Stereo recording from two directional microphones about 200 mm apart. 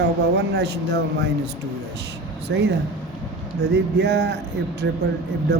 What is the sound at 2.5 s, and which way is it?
Speech, 65° right (ahead or behind).